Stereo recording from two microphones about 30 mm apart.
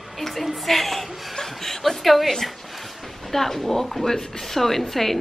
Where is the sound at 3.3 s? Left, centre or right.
Centre.